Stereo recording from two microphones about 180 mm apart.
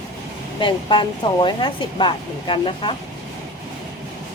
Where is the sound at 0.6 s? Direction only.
25° left (ahead or behind).